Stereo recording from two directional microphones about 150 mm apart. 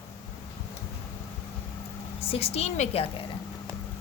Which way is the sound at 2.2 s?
40° left (ahead or behind).